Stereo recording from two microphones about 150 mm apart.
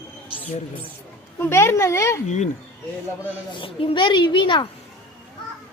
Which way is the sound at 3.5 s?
35° left (ahead or behind).